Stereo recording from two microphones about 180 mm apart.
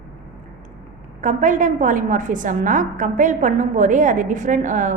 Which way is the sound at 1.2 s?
45° right (ahead or behind).